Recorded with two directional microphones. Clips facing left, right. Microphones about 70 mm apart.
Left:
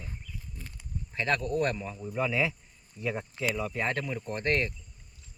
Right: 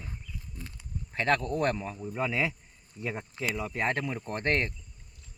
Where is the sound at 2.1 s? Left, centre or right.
Right.